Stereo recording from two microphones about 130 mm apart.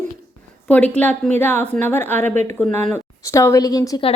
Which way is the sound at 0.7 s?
10° left (ahead or behind).